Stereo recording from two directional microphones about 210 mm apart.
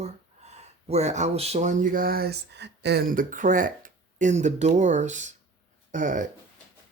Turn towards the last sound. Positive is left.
turn(degrees=-40)  # may be behind; listen again after turning